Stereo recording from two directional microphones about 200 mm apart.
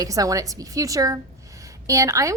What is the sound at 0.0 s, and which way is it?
A woman's voice, 15° right (ahead or behind).